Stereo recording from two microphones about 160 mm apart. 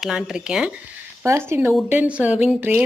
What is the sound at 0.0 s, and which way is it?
Speech, 5° right (ahead or behind).